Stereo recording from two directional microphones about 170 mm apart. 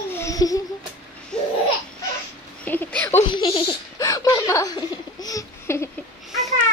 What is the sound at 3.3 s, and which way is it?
Laughter, 30° left (ahead or behind).